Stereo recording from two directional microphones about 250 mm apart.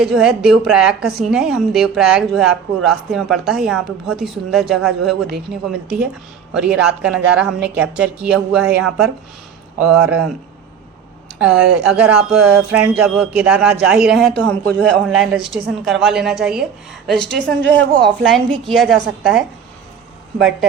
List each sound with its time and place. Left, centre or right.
0.0 s a woman's voice: centre
11.3 s a woman's voice: centre
17.6 s speech: right
18.0 s a woman's voice: centre